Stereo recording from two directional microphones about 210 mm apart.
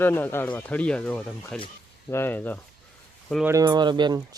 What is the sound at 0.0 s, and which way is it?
Speech, 10° left (ahead or behind).